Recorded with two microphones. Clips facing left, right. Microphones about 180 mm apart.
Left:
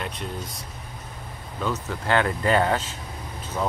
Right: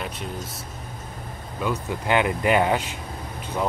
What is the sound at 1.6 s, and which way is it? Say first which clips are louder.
Speech: right 2 dB; 15° right (ahead or behind).